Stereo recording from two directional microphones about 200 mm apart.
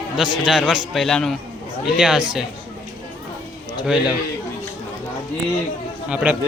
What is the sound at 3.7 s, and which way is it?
Speech, 5° right (ahead or behind).